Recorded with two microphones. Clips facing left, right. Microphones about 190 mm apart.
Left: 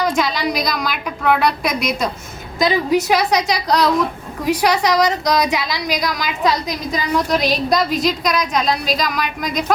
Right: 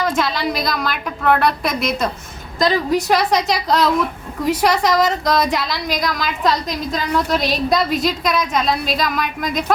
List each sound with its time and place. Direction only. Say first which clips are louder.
0.0 s a woman's voice: left 1 dB; centre (ahead or behind)